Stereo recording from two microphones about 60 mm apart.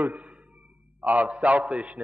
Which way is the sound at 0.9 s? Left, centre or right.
Right.